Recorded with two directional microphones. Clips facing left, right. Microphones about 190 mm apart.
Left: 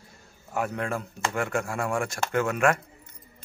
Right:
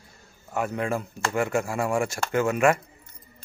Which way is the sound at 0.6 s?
5° right (ahead or behind).